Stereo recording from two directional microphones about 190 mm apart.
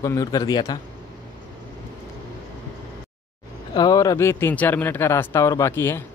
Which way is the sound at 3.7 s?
20° left (ahead or behind).